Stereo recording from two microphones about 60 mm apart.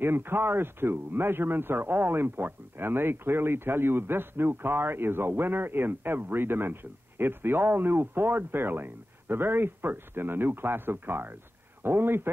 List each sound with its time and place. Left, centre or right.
0.0 s speech: right